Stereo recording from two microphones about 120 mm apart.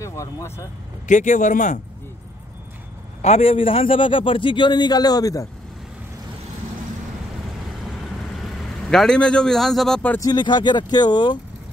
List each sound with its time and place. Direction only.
0.0 s speech: 25° left (ahead or behind)
1.0 s speech: 90° left
3.2 s a man's voice: 60° left (ahead or behind); by 5.5 s 30° left (ahead or behind)
8.3 s a man's voice: centre (ahead or behind)
10.2 s speech: 40° left (ahead or behind)